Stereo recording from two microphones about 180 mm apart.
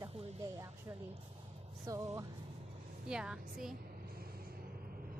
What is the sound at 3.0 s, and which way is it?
Speech, 5° right (ahead or behind).